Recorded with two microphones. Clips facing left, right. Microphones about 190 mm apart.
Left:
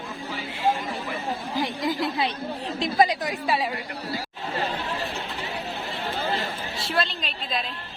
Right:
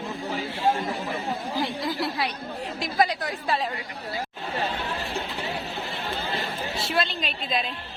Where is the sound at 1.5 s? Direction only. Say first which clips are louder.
Left 3 dB; 20° left (ahead or behind).